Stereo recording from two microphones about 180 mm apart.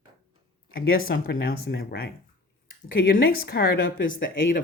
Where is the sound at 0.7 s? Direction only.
55° left (ahead or behind); by 4.4 s 85° left.